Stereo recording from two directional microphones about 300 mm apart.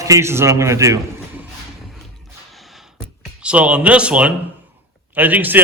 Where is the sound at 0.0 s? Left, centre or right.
Centre.